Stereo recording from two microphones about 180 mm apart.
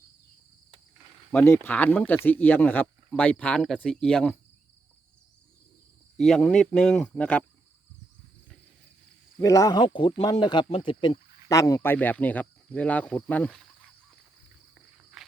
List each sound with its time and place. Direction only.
1.3 s speech: 10° left (ahead or behind)
6.1 s speech: centre (ahead or behind)
9.4 s speech: 20° left (ahead or behind)
9.8 s speech: 30° left (ahead or behind); by 13.9 s centre (ahead or behind)